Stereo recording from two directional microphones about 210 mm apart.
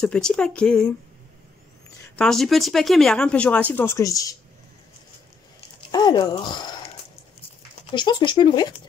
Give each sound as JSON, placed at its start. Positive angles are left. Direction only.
{"t": 0.0, "sound": "speech", "side_deg": 5}
{"t": 2.1, "sound": "speech", "side_deg": 0}
{"t": 5.8, "sound": "speech", "side_deg": 20}
{"t": 7.9, "sound": "speech", "side_deg": 20}